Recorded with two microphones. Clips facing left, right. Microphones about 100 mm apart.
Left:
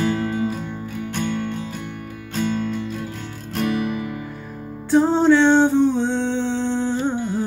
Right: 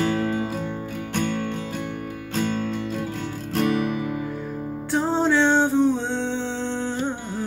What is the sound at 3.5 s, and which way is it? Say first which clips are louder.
Music: even; 25° right (ahead or behind).